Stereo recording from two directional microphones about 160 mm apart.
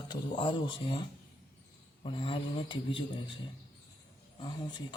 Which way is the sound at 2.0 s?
35° left (ahead or behind).